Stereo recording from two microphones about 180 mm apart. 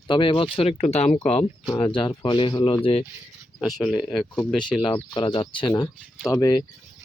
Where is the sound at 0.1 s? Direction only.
30° left (ahead or behind).